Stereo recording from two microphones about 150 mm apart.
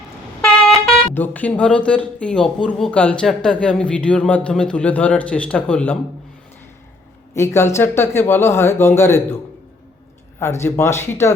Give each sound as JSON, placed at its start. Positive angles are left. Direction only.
{"t": 0.4, "sound": "vehicle horn", "side_deg": 5}
{"t": 1.1, "sound": "speech", "side_deg": 10}
{"t": 7.3, "sound": "speech", "side_deg": 15}
{"t": 10.4, "sound": "speech", "side_deg": 15}